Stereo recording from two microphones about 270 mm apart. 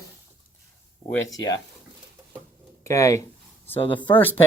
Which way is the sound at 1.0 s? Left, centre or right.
Centre.